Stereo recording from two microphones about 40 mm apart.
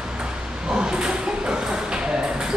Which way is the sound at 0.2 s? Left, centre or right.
Centre.